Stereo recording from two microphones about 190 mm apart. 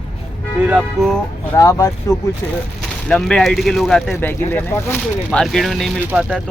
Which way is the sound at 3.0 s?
5° left (ahead or behind).